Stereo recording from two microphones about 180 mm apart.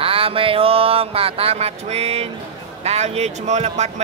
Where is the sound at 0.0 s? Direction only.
30° right (ahead or behind).